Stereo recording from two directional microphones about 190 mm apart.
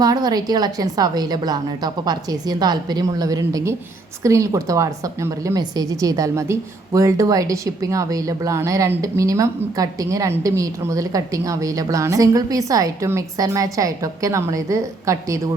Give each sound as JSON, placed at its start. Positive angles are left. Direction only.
{"t": 0.0, "sound": "a woman's voice", "side_deg": -20}